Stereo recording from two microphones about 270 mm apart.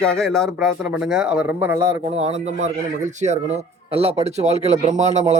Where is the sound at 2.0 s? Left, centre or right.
Right.